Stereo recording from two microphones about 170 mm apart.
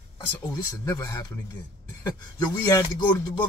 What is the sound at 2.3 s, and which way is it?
Speech, 20° left (ahead or behind).